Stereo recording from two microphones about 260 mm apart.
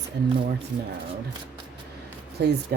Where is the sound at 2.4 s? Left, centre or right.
Right.